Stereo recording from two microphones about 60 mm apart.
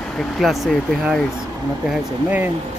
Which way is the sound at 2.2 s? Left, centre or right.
Right.